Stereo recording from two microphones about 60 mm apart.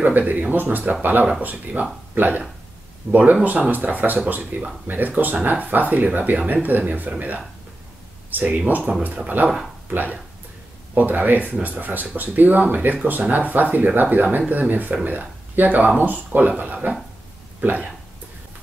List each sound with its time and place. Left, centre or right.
0.0 s speech: right